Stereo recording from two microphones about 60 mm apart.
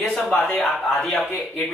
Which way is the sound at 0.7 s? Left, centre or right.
Centre.